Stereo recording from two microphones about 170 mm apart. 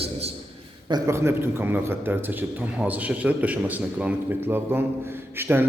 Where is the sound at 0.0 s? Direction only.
35° right (ahead or behind).